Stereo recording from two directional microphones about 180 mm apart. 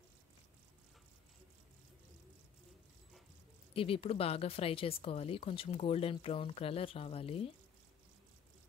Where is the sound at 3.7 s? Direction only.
30° left (ahead or behind).